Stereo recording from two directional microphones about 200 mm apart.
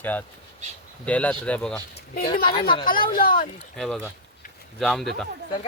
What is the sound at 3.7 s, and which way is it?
Speech, 5° left (ahead or behind).